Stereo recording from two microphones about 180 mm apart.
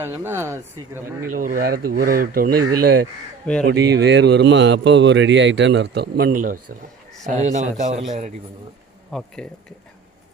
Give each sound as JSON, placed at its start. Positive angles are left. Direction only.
{"t": 0.0, "sound": "speech", "side_deg": -15}
{"t": 1.3, "sound": "a man's voice", "side_deg": -50}
{"t": 9.1, "sound": "speech", "side_deg": 5}